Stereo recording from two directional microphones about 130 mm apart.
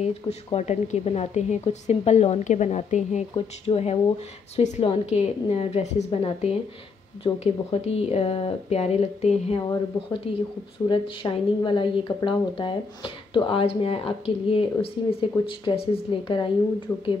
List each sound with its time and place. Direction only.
0.0 s a woman's voice: 55° left (ahead or behind)
3.3 s a woman's voice: 50° left (ahead or behind)
16.9 s speech: 20° left (ahead or behind)